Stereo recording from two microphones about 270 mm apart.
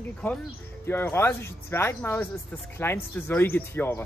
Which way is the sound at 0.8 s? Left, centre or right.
Centre.